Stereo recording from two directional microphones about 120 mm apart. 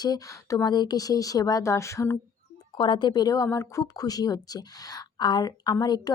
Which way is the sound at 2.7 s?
40° left (ahead or behind).